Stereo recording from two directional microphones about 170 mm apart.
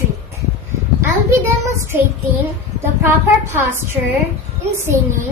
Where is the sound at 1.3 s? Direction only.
15° right (ahead or behind).